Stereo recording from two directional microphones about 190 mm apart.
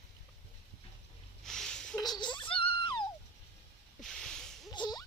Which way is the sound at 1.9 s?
20° left (ahead or behind).